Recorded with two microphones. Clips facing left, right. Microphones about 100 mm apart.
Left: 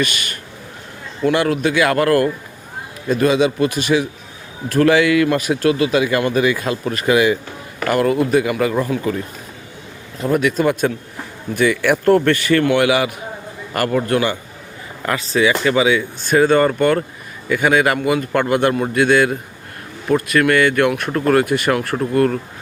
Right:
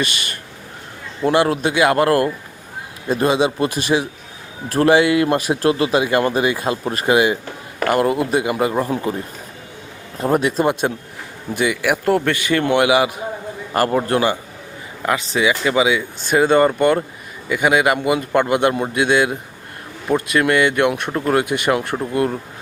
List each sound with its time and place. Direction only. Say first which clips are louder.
0.0 s speech: left 2 dB; 30° right (ahead or behind)